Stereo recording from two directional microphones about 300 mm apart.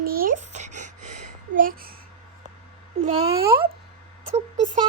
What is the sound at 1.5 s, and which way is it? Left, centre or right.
Child singing, right.